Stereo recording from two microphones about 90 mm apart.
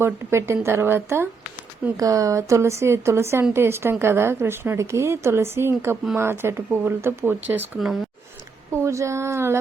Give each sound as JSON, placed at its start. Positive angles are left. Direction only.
{"t": 0.0, "sound": "a woman's voice", "side_deg": -30}
{"t": 2.0, "sound": "a woman's voice", "side_deg": -40}
{"t": 8.7, "sound": "a woman's voice", "side_deg": -35}